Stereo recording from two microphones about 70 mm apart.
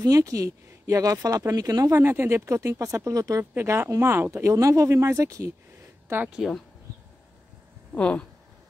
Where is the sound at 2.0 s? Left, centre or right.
Right.